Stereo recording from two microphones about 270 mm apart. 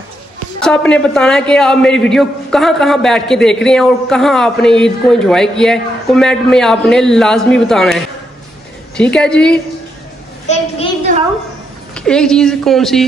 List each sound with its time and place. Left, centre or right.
0.6 s a man's voice: centre
10.5 s a woman's voice: left
11.1 s a sound: right
11.9 s a man's voice: centre